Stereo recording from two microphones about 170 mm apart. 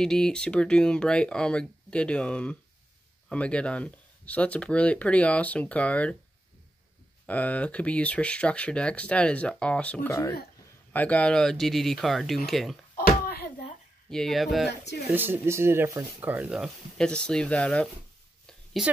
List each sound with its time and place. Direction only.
0.0 s speech: 5° left (ahead or behind)
7.2 s speech: 10° left (ahead or behind)
12.9 s a sound: 65° left (ahead or behind)
14.1 s speech: centre (ahead or behind)
15.1 s speech: 15° right (ahead or behind); by 17.8 s 10° left (ahead or behind)
18.5 s a sound: centre (ahead or behind)